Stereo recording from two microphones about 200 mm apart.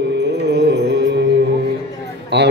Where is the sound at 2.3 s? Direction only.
60° right (ahead or behind).